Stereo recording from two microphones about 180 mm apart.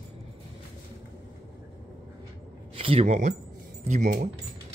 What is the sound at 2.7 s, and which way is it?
Speech, 30° right (ahead or behind).